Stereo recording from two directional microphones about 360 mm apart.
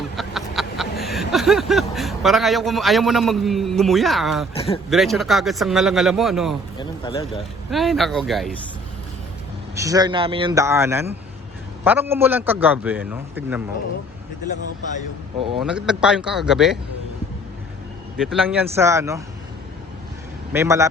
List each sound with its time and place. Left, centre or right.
0.2 s speech: centre
4.5 s speech: centre
4.9 s a man's voice: centre
6.7 s speech: centre
7.7 s a man's voice: centre
9.7 s a man's voice: centre
15.5 s a man's voice: centre
18.2 s a man's voice: centre
20.5 s a man's voice: centre